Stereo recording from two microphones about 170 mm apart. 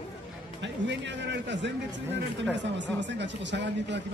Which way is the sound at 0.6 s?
90° right.